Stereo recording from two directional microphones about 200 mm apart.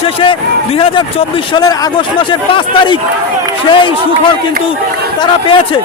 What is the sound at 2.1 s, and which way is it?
Speech, 25° left (ahead or behind).